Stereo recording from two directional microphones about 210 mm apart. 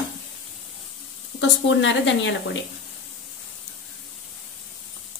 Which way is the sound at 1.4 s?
60° left (ahead or behind).